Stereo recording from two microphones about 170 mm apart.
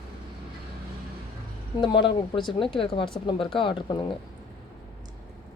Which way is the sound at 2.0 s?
30° left (ahead or behind).